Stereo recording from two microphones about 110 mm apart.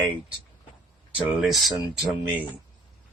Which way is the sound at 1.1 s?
10° right (ahead or behind).